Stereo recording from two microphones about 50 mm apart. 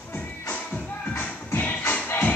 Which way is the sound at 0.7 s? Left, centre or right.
Left.